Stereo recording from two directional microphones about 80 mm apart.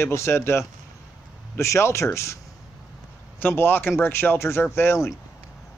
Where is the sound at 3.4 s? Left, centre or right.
Left.